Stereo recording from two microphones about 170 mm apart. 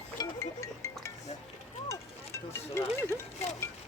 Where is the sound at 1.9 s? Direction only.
15° left (ahead or behind).